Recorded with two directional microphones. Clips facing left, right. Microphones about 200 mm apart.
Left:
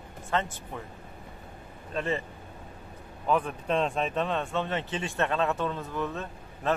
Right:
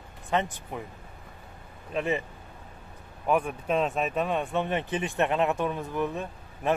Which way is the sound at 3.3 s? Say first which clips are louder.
Right 1 dB; 10° right (ahead or behind).